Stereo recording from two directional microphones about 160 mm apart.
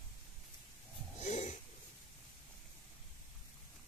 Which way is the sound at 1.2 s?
50° left (ahead or behind).